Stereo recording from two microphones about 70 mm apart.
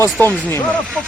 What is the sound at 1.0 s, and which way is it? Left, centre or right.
Speech, centre.